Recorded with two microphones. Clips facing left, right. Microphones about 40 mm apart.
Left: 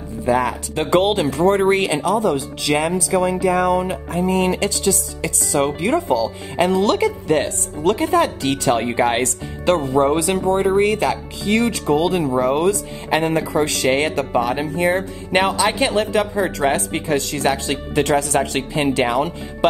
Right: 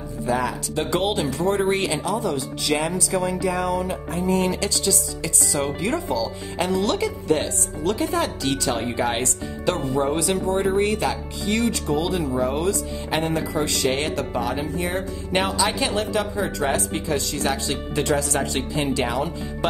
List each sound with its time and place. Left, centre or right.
0.3 s speech: left
3.2 s speech: left
4.1 s speech: left
5.8 s speech: left
10.5 s speech: centre
10.8 s speech: left
12.5 s speech: left
13.2 s speech: left
15.0 s speech: left